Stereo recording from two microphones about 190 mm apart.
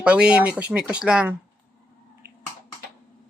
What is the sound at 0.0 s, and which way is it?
Speech, 5° right (ahead or behind).